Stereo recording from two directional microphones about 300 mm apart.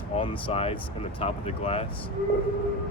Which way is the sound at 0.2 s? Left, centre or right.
Centre.